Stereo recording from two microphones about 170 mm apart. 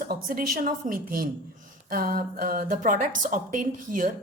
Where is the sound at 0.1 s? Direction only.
60° right (ahead or behind).